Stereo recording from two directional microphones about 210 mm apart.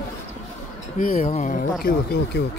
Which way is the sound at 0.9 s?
40° left (ahead or behind).